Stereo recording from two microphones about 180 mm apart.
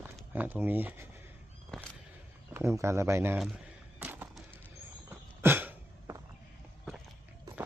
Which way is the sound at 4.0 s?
10° right (ahead or behind).